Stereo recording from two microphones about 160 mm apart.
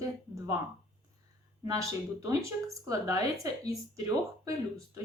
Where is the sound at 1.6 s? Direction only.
20° right (ahead or behind).